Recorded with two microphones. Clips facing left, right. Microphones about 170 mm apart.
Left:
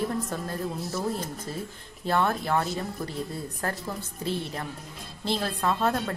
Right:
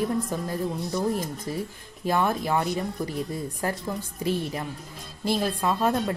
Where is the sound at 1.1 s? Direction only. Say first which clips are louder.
Right 4 dB; 15° right (ahead or behind).